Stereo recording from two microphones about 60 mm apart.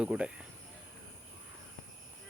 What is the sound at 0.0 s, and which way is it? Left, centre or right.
Speech, centre.